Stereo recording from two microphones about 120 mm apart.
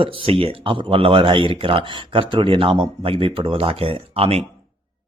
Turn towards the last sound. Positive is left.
turn(degrees=-55)  # may be behind; listen again after turning